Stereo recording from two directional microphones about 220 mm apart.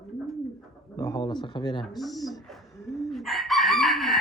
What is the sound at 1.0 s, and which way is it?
Speech, 15° left (ahead or behind).